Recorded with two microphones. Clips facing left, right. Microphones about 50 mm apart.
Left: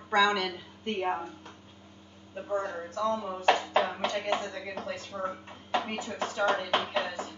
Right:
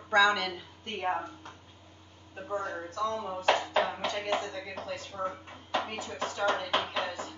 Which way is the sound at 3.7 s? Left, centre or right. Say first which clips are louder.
Left 1 dB; centre.